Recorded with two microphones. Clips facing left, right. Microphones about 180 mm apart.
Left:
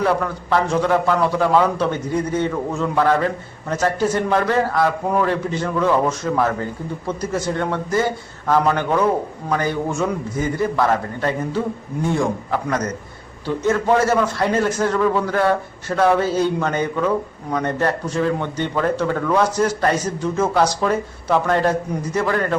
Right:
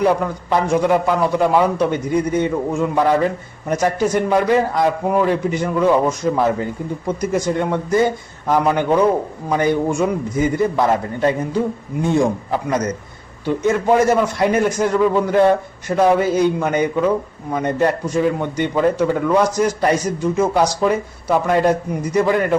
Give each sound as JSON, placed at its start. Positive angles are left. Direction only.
{"t": 0.0, "sound": "a man's voice", "side_deg": -15}